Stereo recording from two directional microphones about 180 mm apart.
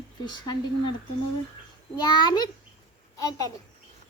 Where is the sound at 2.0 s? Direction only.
25° left (ahead or behind).